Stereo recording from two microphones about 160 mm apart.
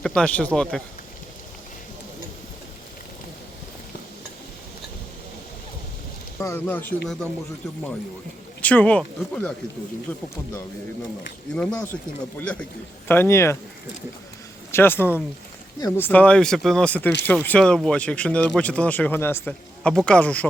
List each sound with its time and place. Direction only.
0.0 s speech: 5° left (ahead or behind)
6.4 s speech: 15° left (ahead or behind)
8.6 s speech: 10° left (ahead or behind)
11.5 s speech: 5° left (ahead or behind)
14.7 s speech: 15° left (ahead or behind)